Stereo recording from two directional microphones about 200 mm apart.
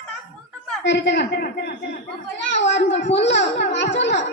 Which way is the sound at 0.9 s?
60° left (ahead or behind).